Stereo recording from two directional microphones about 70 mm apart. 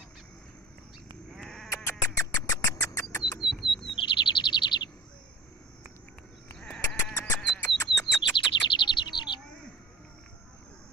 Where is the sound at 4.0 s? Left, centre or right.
Left.